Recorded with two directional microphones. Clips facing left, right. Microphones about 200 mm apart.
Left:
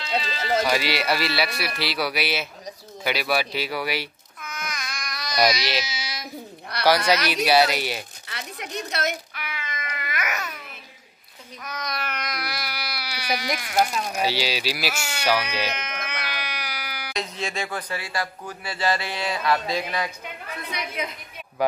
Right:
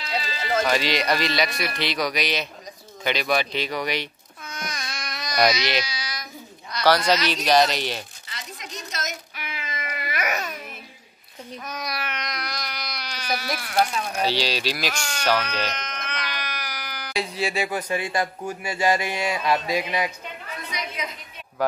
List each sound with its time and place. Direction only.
0.7 s a man's voice: 10° left (ahead or behind)
4.4 s baby cry: 30° right (ahead or behind)
5.3 s speech: 5° left (ahead or behind)
5.9 s child singing: 25° left (ahead or behind)
6.7 s a sound: 60° left (ahead or behind)
7.4 s a man's voice: 10° left (ahead or behind)
8.3 s a sound: 60° left (ahead or behind)
9.3 s babbling: 25° right (ahead or behind)
11.8 s a sound: 5° right (ahead or behind); by 13.8 s 15° left (ahead or behind)
14.0 s sheep: 10° left (ahead or behind)
17.1 s speech: 10° right (ahead or behind)
20.7 s a woman's voice: 55° left (ahead or behind)